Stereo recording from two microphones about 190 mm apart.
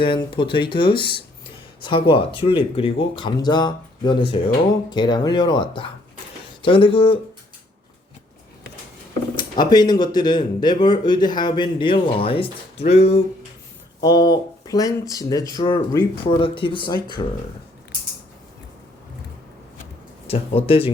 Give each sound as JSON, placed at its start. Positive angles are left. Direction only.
{"t": 0.0, "sound": "speech", "side_deg": 25}
{"t": 9.3, "sound": "speech", "side_deg": 25}
{"t": 14.0, "sound": "speech", "side_deg": 20}
{"t": 20.2, "sound": "speech", "side_deg": 30}